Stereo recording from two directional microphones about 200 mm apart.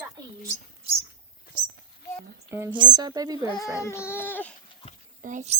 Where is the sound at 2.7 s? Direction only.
20° right (ahead or behind).